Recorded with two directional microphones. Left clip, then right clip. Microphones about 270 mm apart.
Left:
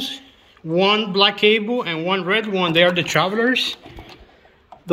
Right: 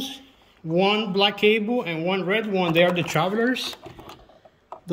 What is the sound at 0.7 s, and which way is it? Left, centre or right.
Speech, centre.